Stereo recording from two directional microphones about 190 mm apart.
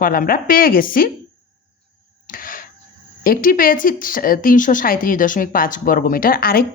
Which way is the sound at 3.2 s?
45° left (ahead or behind).